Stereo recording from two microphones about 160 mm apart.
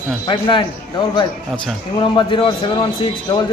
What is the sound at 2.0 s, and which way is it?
A man's voice, 30° left (ahead or behind).